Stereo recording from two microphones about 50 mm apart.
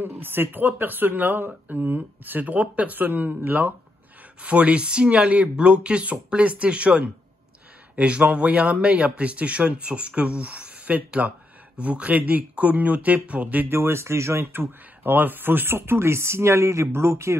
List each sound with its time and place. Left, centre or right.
0.0 s speech: right
3.0 s speech: right
4.4 s speech: right
13.7 s speech: right
14.5 s speech: right